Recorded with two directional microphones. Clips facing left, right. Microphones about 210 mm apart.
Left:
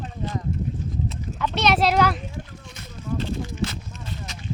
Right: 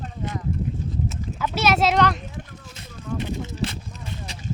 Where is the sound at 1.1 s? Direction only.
5° right (ahead or behind).